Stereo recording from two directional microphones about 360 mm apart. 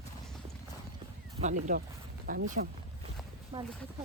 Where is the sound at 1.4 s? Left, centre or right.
Centre.